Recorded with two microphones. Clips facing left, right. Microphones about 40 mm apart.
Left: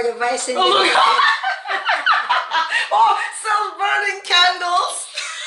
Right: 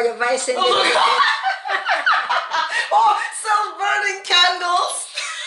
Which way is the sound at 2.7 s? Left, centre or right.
Left.